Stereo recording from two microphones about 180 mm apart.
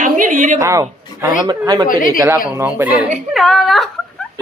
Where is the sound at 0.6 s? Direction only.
15° right (ahead or behind).